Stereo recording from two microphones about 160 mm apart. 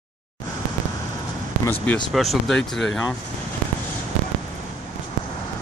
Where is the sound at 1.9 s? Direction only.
10° left (ahead or behind).